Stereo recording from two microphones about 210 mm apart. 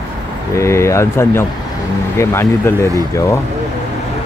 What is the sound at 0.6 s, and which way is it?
Speech, 15° left (ahead or behind).